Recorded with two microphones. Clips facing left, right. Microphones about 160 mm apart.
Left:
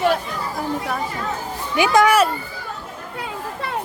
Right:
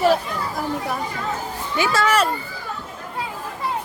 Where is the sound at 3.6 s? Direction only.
65° left (ahead or behind).